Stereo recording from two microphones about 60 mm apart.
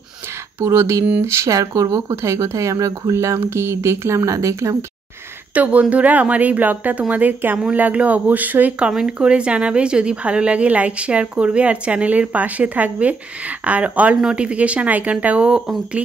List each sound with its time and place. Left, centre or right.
0.7 s speech: right
1.5 s speech: right
2.0 s speech: right
4.3 s speech: right
5.5 s a woman's voice: right